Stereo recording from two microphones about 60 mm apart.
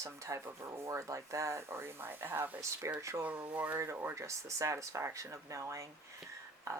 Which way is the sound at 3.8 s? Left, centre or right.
Right.